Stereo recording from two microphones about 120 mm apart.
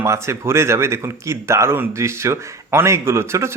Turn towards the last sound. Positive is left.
turn(degrees=-20)  # may be behind; listen again after turning